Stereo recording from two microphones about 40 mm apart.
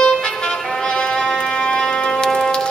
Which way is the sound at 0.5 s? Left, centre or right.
Centre.